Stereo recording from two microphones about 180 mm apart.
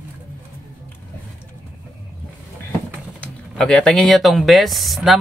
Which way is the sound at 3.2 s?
5° left (ahead or behind).